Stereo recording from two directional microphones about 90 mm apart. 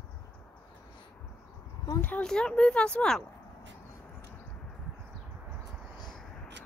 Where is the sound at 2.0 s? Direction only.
10° left (ahead or behind).